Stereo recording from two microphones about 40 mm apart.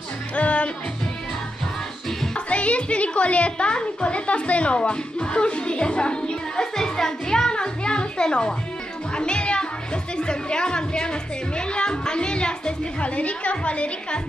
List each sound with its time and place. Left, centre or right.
0.4 s music: left
2.3 s a woman's voice: left